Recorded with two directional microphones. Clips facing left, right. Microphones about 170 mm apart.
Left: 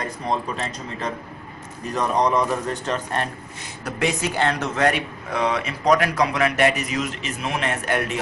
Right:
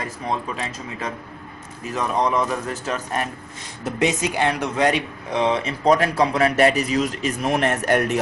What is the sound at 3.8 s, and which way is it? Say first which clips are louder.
Speech: right 2 dB; 20° right (ahead or behind).